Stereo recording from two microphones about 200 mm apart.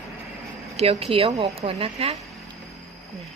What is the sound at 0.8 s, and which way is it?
Speech, 30° right (ahead or behind).